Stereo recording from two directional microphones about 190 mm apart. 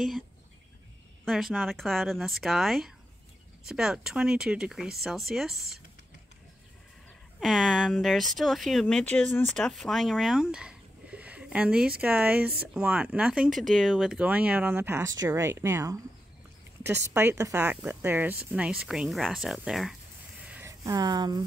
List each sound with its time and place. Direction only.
1.2 s speech: centre (ahead or behind)
7.3 s speech: centre (ahead or behind)
20.4 s a sound: 10° right (ahead or behind)